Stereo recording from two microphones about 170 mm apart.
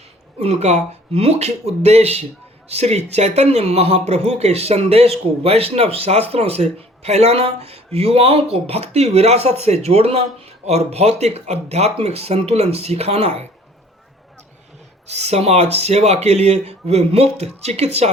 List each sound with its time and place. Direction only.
0.3 s speech: 40° right (ahead or behind)
15.0 s speech: 40° right (ahead or behind)